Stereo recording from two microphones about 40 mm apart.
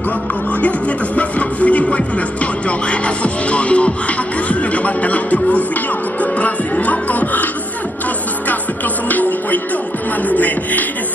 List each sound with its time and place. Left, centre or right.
0.5 s speech: left
9.1 s music: left